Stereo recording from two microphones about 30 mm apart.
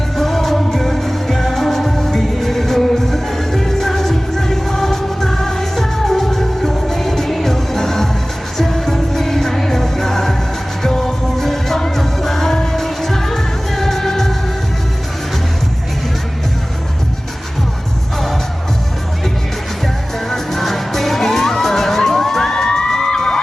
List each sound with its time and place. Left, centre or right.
0.2 s music: centre
20.3 s music: centre
22.5 s music: left